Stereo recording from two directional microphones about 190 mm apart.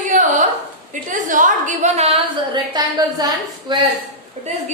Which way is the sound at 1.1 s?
45° right (ahead or behind).